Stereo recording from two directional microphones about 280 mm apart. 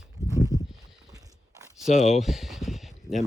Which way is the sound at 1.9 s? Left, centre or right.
Left.